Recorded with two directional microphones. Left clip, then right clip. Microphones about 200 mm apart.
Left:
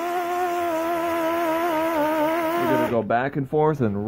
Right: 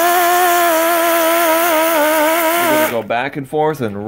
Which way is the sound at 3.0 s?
15° left (ahead or behind).